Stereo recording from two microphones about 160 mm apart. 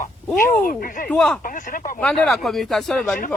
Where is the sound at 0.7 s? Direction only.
60° left (ahead or behind).